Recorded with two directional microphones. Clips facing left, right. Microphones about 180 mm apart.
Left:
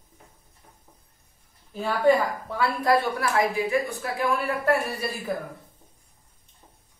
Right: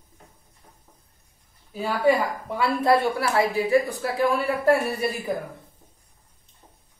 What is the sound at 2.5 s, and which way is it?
A woman's voice, 20° right (ahead or behind).